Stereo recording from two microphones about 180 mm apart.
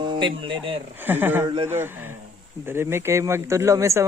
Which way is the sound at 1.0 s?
10° right (ahead or behind).